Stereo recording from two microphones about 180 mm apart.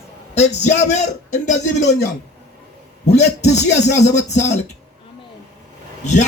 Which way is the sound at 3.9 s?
40° left (ahead or behind).